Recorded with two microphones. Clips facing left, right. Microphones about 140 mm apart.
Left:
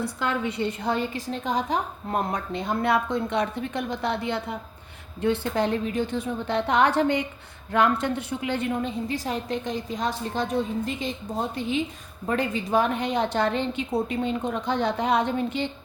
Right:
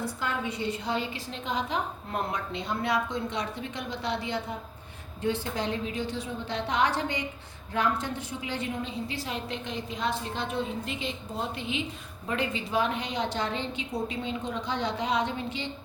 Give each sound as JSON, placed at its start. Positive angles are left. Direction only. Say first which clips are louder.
{"t": 0.2, "sound": "a woman's voice", "louder": "left 8 dB", "side_deg": 70}